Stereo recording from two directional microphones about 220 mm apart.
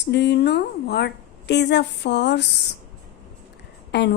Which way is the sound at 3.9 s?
50° left (ahead or behind).